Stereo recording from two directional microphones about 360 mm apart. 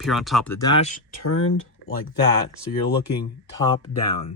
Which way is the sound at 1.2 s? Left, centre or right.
Left.